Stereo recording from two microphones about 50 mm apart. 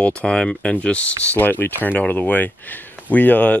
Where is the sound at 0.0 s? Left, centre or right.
Left.